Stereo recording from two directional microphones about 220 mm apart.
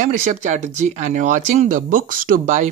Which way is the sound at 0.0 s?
35° right (ahead or behind).